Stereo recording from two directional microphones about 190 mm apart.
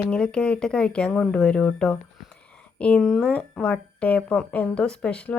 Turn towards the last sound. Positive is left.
turn(degrees=5)  # may be behind; listen again after turning